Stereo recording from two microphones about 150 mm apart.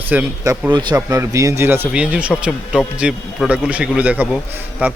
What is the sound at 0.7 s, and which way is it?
Speech, 30° right (ahead or behind).